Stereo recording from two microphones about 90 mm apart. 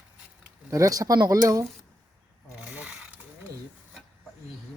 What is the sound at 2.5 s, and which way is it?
Ratchet, 15° right (ahead or behind).